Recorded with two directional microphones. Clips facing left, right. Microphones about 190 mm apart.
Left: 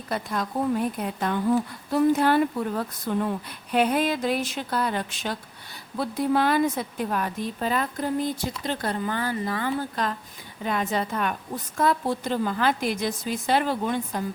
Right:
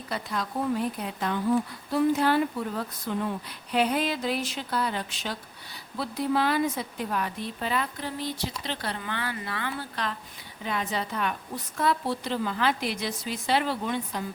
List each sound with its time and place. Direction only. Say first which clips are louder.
0.1 s a woman's voice: left 4 dB; 50° left (ahead or behind)